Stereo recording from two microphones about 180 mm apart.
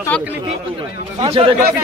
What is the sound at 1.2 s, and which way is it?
Speech, 30° right (ahead or behind).